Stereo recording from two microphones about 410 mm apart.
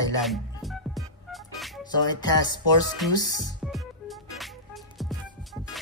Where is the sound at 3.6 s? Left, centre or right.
Centre.